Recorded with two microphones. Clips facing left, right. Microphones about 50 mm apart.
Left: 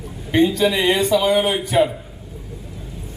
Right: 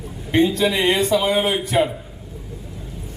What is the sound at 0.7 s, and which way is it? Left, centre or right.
Speech, right.